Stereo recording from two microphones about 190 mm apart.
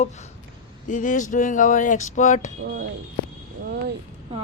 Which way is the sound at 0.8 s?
40° left (ahead or behind).